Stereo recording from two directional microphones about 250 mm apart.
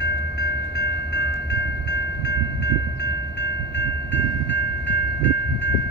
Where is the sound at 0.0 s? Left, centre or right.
Left.